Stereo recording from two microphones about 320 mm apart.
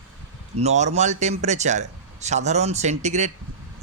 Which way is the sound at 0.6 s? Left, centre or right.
Right.